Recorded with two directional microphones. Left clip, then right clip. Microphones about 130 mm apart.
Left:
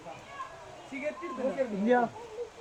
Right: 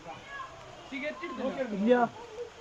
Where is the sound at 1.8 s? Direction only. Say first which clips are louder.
Right 2 dB; 15° right (ahead or behind).